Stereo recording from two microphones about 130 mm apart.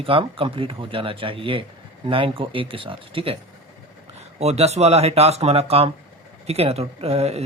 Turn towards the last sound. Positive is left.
turn(degrees=-50)  # may be behind; listen again after turning